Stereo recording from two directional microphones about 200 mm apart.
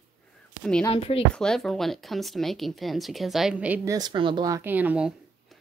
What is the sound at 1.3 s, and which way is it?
Speech, 5° left (ahead or behind).